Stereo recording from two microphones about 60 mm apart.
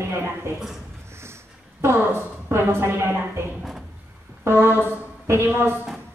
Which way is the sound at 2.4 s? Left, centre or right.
Right.